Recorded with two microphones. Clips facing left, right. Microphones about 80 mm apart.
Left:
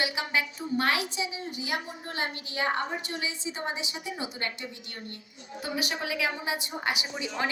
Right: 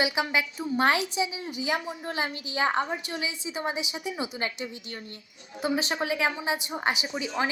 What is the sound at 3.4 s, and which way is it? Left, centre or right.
Speech, centre.